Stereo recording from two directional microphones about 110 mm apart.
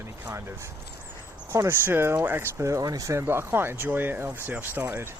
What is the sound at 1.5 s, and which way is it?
Speech, 25° right (ahead or behind).